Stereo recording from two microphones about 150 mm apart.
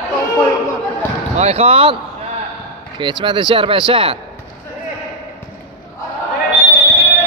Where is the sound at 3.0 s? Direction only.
30° right (ahead or behind).